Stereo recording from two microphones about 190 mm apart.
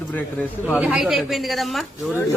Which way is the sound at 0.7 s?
5° right (ahead or behind).